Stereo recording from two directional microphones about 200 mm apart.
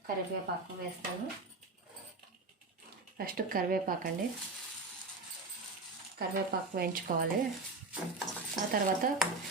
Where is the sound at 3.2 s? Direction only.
45° right (ahead or behind).